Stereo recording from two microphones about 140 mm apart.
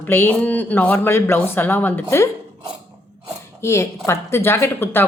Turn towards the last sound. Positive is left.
turn(degrees=15)  # may be behind; listen again after turning